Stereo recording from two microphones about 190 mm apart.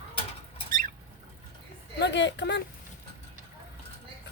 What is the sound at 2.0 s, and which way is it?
Speech, 65° left (ahead or behind).